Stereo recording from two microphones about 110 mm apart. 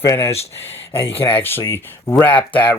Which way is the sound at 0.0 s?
25° left (ahead or behind).